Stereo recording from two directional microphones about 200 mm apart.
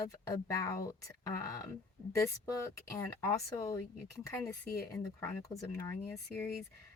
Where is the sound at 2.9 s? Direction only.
15° left (ahead or behind).